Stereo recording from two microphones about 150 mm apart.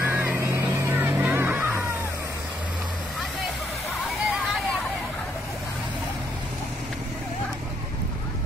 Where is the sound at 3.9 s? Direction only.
Centre (ahead or behind).